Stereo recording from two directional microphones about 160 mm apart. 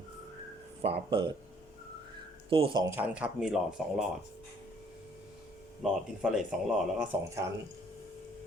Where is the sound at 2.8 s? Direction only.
15° right (ahead or behind).